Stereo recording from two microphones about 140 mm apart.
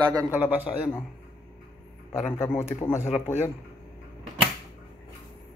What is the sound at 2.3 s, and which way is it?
Speech, 15° left (ahead or behind).